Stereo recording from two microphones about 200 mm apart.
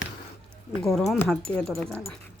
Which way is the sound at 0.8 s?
Centre (ahead or behind).